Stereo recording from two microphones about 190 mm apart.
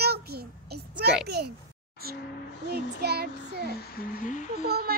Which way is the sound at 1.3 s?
60° right (ahead or behind).